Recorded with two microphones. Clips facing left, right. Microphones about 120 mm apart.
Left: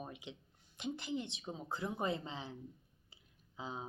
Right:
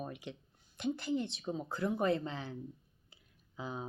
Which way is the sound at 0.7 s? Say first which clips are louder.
Right 6 dB; 20° left (ahead or behind).